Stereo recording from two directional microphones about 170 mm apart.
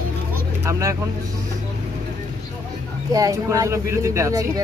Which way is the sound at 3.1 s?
20° right (ahead or behind).